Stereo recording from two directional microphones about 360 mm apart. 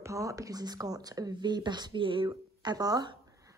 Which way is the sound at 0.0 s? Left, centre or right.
Centre.